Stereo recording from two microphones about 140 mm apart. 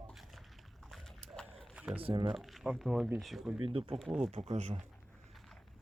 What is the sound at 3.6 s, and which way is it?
Speech, 40° right (ahead or behind).